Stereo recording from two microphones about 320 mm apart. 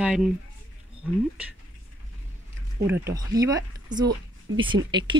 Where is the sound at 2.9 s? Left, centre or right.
Centre.